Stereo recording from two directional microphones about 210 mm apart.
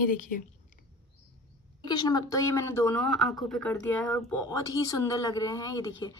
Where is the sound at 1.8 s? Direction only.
20° left (ahead or behind).